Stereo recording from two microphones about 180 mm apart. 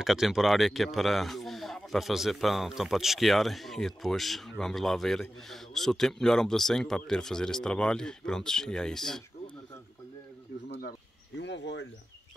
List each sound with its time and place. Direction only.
0.0 s speech: centre (ahead or behind)
10.8 s speech: 65° left (ahead or behind)